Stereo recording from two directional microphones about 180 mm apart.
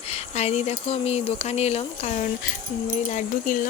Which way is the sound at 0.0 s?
35° left (ahead or behind).